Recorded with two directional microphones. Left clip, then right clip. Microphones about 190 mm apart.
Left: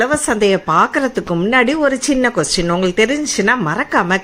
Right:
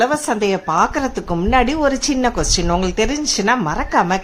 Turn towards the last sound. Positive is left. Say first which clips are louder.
# left 1 dB
turn(degrees=5)  # may be behind; listen again after turning